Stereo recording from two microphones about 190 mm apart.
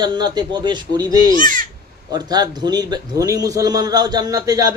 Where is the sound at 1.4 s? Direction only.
45° right (ahead or behind).